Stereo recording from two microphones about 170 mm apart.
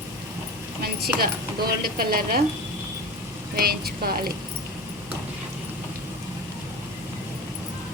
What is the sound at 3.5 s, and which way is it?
Speech, 65° right (ahead or behind).